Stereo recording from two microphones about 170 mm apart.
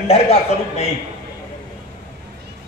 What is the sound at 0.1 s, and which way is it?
Speech, 40° left (ahead or behind).